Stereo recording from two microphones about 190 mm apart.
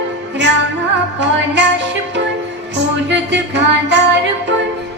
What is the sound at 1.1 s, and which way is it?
Music, 65° right (ahead or behind).